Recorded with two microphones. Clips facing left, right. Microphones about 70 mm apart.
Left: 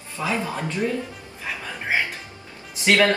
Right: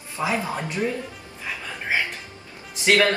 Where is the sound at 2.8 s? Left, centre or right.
Left.